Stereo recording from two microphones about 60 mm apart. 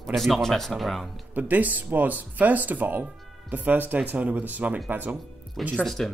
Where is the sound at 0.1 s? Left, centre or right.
Centre.